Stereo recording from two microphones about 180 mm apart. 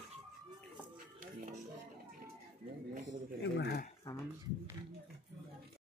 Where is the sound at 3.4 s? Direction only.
65° left (ahead or behind).